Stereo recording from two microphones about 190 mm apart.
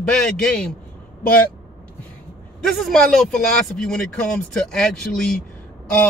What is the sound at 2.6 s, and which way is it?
A man's voice, centre (ahead or behind).